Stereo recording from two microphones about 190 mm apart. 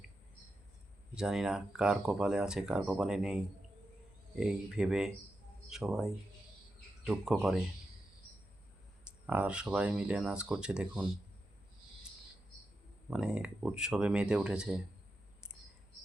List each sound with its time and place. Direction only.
1.1 s speech: 5° right (ahead or behind)
9.2 s speech: 5° right (ahead or behind)
13.1 s speech: 5° right (ahead or behind)